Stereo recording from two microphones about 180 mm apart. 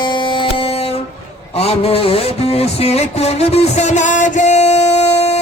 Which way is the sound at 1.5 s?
35° left (ahead or behind).